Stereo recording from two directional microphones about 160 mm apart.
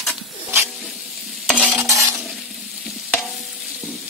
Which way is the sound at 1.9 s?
20° right (ahead or behind).